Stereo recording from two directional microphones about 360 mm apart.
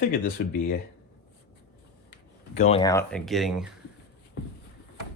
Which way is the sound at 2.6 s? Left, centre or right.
Centre.